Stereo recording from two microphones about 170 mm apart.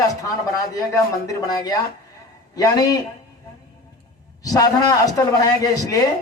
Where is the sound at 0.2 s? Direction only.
20° left (ahead or behind).